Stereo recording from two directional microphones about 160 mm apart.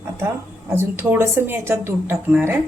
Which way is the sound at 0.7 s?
15° right (ahead or behind).